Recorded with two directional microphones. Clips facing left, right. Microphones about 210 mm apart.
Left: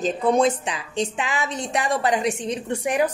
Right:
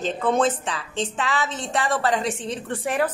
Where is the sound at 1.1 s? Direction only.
15° left (ahead or behind).